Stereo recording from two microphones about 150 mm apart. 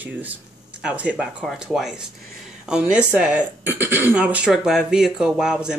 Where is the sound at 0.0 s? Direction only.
10° right (ahead or behind).